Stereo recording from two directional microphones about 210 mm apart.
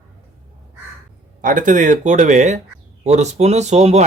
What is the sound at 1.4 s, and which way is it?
Speech, 40° right (ahead or behind).